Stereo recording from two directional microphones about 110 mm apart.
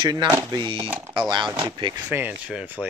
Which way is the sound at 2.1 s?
15° right (ahead or behind).